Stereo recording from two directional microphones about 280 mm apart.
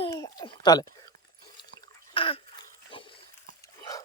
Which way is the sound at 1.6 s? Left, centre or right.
Centre.